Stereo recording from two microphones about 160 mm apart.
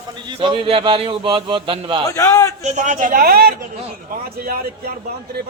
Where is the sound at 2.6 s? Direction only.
50° right (ahead or behind).